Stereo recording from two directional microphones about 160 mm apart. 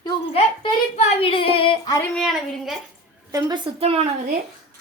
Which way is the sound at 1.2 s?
35° left (ahead or behind).